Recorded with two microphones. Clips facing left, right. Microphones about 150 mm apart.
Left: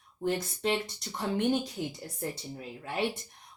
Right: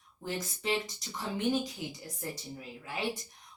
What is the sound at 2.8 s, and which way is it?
Speech, 65° left (ahead or behind).